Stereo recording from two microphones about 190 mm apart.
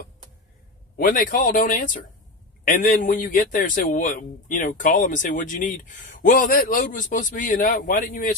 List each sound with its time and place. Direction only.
0.9 s a man's voice: 45° left (ahead or behind)